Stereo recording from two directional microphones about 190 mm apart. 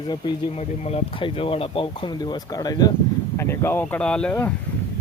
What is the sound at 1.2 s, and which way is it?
Speech, 30° left (ahead or behind).